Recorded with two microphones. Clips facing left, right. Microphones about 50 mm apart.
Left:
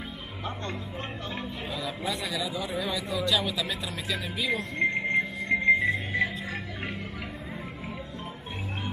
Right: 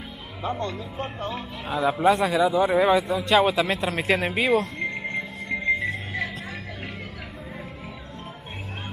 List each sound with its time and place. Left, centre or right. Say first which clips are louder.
0.4 s speech: right 9 dB; right
1.7 s a man's voice: right 14 dB; right
4.7 s music: left 3 dB; left